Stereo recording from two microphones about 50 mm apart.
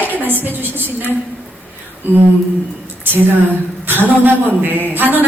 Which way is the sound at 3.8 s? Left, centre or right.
Right.